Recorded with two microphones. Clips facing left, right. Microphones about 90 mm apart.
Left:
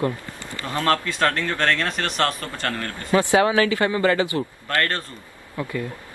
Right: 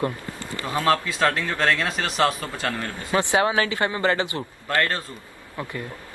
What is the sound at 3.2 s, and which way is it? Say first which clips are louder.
Speech: left 3 dB; 25° right (ahead or behind).